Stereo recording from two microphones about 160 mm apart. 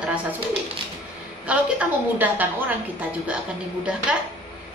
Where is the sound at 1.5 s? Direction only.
10° right (ahead or behind).